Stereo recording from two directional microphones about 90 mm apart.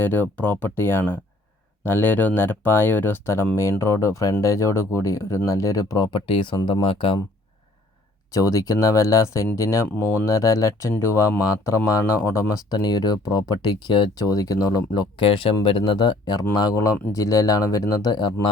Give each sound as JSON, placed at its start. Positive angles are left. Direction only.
{"t": 0.0, "sound": "speech", "side_deg": 25}
{"t": 6.8, "sound": "speech", "side_deg": 85}
{"t": 8.3, "sound": "speech", "side_deg": 35}
{"t": 12.7, "sound": "speech", "side_deg": 50}
{"t": 15.2, "sound": "speech", "side_deg": 85}
{"t": 15.6, "sound": "speech", "side_deg": 70}